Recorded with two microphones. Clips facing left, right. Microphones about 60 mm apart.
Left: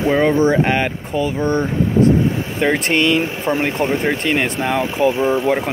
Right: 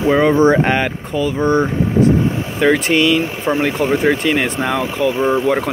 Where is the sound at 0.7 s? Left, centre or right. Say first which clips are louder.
Right 1 dB; centre.